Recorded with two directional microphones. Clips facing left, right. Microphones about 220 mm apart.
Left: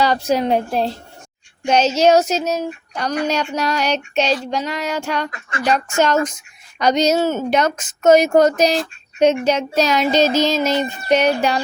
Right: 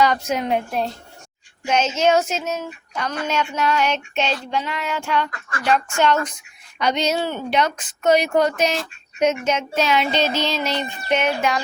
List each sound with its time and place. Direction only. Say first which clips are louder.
0.0 s child singing: left 3 dB; 35° left (ahead or behind)
5.6 s a woman's voice: left 2 dB; 40° left (ahead or behind)
9.1 s child singing: left 5 dB; 30° left (ahead or behind)